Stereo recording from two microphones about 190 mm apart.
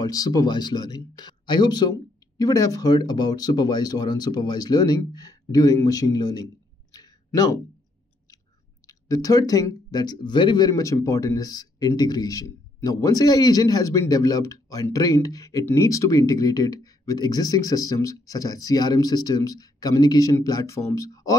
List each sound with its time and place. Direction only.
0.0 s speech: 20° left (ahead or behind)
8.8 s speech: 20° left (ahead or behind)